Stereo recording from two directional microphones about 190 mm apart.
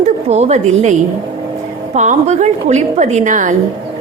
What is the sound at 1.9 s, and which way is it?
A woman's voice, 40° right (ahead or behind).